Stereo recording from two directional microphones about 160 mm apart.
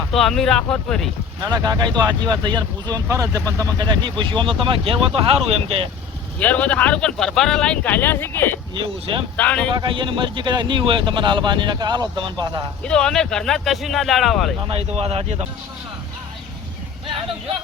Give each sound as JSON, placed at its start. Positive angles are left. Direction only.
{"t": 0.1, "sound": "speech", "side_deg": 0}
{"t": 1.4, "sound": "a man's voice", "side_deg": -25}
{"t": 6.4, "sound": "speech", "side_deg": 10}
{"t": 8.7, "sound": "speech", "side_deg": -30}
{"t": 9.4, "sound": "speech", "side_deg": 10}
{"t": 9.6, "sound": "a man's voice", "side_deg": -30}
{"t": 12.8, "sound": "speech", "side_deg": 5}
{"t": 14.6, "sound": "speech", "side_deg": -40}